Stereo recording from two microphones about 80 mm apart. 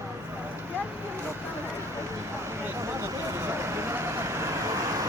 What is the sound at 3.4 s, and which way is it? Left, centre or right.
Vehicle, right.